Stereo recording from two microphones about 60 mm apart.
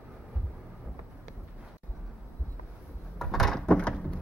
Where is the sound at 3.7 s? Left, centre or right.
Centre.